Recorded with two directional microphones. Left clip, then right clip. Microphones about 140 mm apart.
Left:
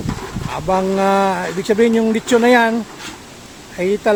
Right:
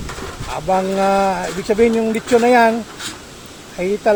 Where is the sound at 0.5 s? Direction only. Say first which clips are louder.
Even; 30° left (ahead or behind).